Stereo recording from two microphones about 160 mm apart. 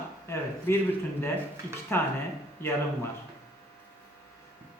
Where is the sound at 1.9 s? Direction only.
15° left (ahead or behind).